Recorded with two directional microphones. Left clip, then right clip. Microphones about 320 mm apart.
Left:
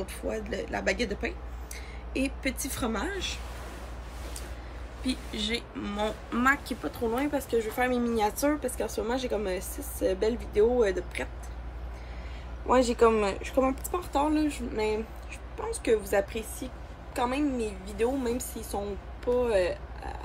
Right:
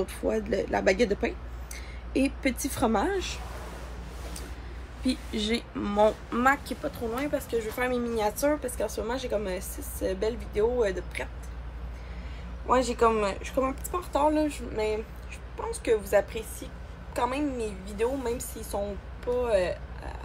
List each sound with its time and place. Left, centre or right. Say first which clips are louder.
0.3 s a woman's voice: right 5 dB; centre
5.0 s a woman's voice: right 2 dB; centre
6.3 s speech: right 1 dB; centre
12.6 s a woman's voice: left 1 dB; centre